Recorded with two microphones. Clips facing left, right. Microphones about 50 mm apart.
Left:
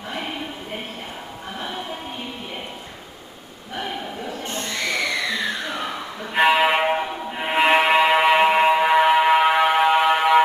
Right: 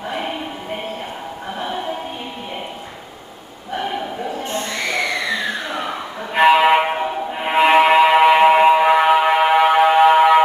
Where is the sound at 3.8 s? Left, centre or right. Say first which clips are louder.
Right 5 dB; centre.